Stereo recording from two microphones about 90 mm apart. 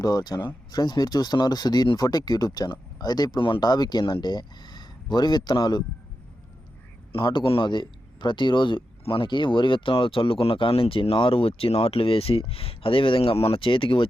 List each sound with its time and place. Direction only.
0.0 s speech: 45° left (ahead or behind)
7.1 s speech: 70° left (ahead or behind)